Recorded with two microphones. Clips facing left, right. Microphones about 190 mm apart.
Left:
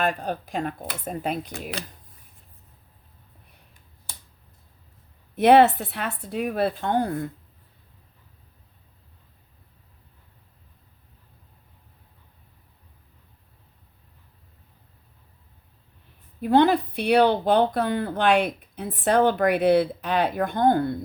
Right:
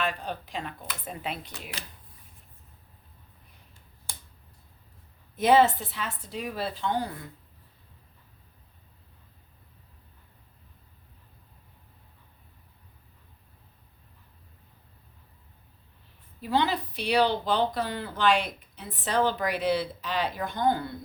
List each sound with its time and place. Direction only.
0.0 s speech: 45° left (ahead or behind)
5.4 s speech: 65° left (ahead or behind)
16.4 s speech: 55° left (ahead or behind)